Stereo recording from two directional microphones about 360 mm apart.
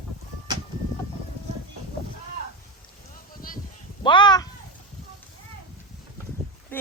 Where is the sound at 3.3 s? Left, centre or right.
Left.